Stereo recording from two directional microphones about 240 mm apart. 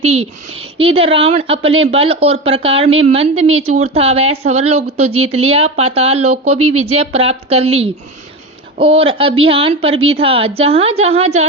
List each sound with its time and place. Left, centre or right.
0.0 s a woman's voice: right
6.6 s speech: right
6.8 s a woman's voice: right